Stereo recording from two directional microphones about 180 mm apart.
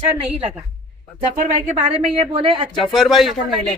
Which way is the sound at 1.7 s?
35° right (ahead or behind).